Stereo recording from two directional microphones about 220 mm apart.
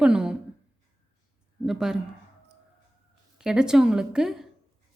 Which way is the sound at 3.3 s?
5° right (ahead or behind).